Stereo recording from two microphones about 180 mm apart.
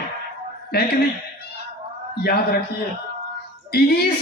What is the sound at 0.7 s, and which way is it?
Speech, 60° left (ahead or behind).